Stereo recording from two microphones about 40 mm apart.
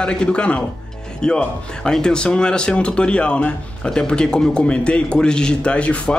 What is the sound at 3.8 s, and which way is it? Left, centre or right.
Speech, centre.